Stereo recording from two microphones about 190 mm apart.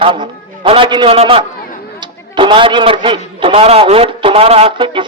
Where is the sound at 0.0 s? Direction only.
25° right (ahead or behind).